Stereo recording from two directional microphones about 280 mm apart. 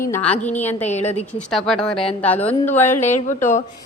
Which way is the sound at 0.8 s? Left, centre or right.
Left.